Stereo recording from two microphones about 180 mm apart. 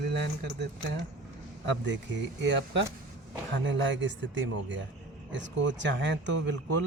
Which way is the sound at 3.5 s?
90° right.